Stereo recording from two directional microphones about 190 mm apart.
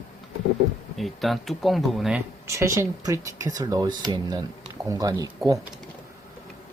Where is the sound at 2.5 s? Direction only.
15° right (ahead or behind).